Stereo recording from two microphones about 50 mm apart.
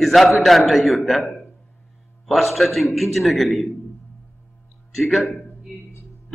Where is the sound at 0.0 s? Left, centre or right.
Centre.